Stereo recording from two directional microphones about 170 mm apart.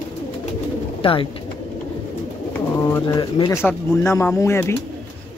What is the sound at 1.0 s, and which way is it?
Speech, 30° left (ahead or behind).